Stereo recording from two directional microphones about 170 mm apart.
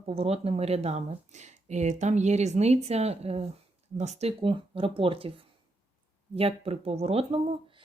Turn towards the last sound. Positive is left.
turn(degrees=-35)  # may be behind; listen again after turning